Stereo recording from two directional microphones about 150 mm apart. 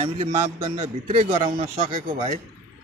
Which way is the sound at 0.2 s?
40° right (ahead or behind).